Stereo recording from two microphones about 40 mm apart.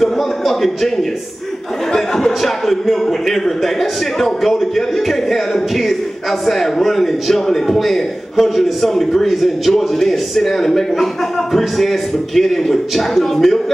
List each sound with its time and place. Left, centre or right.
0.0 s a man's voice: centre